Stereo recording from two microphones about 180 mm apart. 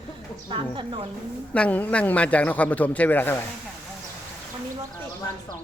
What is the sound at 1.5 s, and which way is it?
Speech, 10° left (ahead or behind).